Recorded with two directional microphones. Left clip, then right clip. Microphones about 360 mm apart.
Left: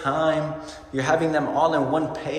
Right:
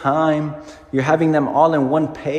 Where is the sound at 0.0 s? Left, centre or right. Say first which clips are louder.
Right 5 dB; centre.